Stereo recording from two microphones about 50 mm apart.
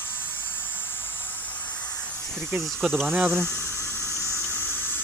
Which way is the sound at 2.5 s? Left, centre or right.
Right.